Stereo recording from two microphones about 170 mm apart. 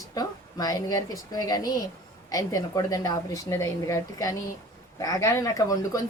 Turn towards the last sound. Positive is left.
turn(degrees=20)  # may be behind; listen again after turning